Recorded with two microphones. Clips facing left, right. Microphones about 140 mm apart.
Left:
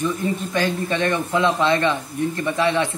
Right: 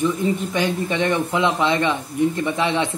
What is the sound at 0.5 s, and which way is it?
Speech, 15° right (ahead or behind).